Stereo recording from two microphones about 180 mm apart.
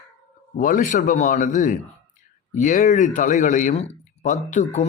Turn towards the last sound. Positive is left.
turn(degrees=40)  # may be behind; listen again after turning